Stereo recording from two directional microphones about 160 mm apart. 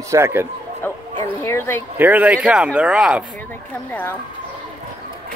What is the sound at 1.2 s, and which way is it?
Speech, 15° left (ahead or behind).